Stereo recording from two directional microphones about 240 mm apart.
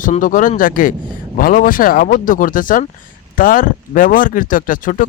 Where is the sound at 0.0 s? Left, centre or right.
Left.